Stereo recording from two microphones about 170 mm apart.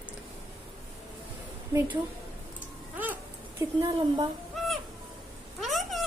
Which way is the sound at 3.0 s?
10° right (ahead or behind).